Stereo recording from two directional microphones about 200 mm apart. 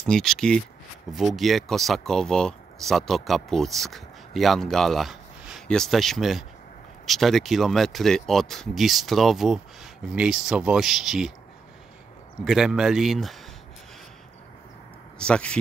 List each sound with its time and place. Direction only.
0.0 s speech: centre (ahead or behind)
12.4 s speech: centre (ahead or behind)
15.1 s speech: 5° left (ahead or behind)